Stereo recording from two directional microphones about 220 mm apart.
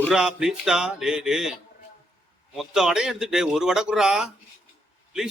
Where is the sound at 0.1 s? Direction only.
5° right (ahead or behind).